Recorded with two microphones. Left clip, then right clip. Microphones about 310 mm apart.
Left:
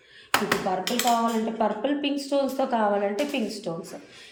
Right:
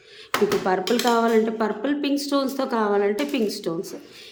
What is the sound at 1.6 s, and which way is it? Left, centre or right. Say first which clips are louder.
A woman's voice: right 1 dB; centre.